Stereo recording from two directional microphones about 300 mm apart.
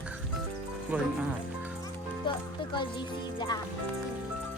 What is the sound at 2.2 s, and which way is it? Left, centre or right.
Music, centre.